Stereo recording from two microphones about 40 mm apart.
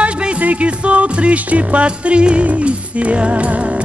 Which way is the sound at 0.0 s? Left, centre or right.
Right.